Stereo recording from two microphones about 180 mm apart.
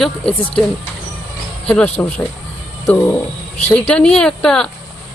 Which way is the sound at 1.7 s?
10° left (ahead or behind).